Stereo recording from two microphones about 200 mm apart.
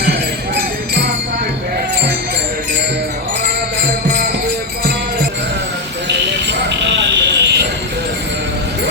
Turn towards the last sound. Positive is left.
turn(degrees=-60)  # may be behind; listen again after turning